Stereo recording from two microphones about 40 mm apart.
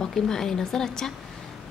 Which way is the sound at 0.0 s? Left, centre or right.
Centre.